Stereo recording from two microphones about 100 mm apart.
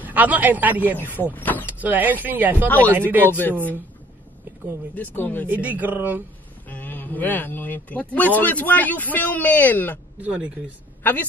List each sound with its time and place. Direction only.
0.0 s a man's voice: 15° right (ahead or behind)
0.9 s speech: 20° left (ahead or behind)
1.7 s speech: 15° right (ahead or behind)
3.3 s speech: 20° left (ahead or behind)
4.9 s speech: 15° left (ahead or behind)
5.5 s speech: 15° right (ahead or behind)
6.7 s speech: 20° left (ahead or behind)
10.2 s speech: 10° right (ahead or behind)
11.0 s a woman's voice: 15° left (ahead or behind)